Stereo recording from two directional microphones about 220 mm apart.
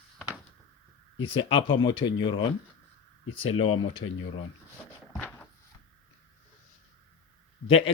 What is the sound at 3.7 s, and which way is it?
Speech, 65° left (ahead or behind).